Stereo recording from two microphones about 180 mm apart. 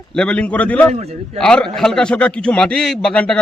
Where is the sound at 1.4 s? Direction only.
5° left (ahead or behind).